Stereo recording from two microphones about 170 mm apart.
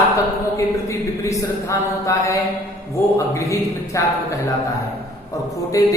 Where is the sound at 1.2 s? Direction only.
15° left (ahead or behind).